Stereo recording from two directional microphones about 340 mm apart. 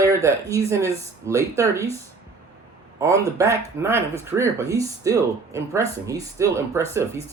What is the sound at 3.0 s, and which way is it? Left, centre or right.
Speech, centre.